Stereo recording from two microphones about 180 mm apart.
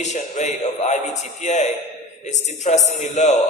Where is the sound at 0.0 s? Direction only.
40° left (ahead or behind).